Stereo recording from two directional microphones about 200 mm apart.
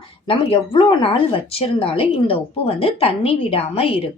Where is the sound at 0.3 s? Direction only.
25° left (ahead or behind).